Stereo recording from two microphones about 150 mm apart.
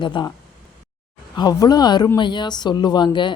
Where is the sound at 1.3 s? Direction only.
25° left (ahead or behind).